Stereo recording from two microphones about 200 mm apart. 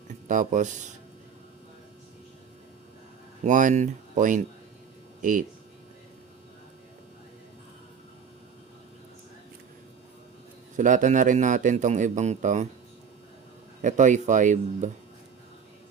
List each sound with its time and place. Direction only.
0.1 s speech: 40° right (ahead or behind)
3.4 s a man's voice: 40° right (ahead or behind)
10.8 s a man's voice: 40° right (ahead or behind)
13.8 s a man's voice: 40° right (ahead or behind)